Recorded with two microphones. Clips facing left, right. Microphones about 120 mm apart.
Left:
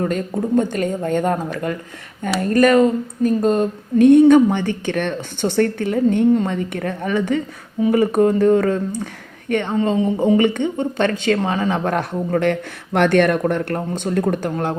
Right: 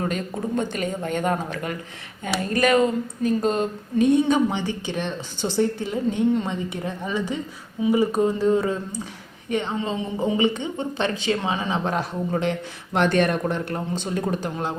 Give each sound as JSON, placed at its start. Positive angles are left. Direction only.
{"t": 0.0, "sound": "speech", "side_deg": 45}
{"t": 4.0, "sound": "speech", "side_deg": 55}
{"t": 9.7, "sound": "speech", "side_deg": 45}
{"t": 10.3, "sound": "speech", "side_deg": 55}